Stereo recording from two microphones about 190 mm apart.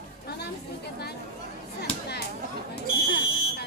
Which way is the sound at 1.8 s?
60° left (ahead or behind).